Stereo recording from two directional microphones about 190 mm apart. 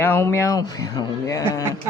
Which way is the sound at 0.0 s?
10° left (ahead or behind).